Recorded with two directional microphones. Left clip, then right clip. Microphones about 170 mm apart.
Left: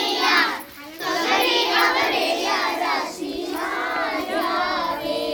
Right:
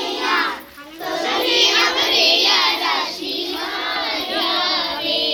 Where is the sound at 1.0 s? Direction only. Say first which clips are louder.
Even; 40° left (ahead or behind).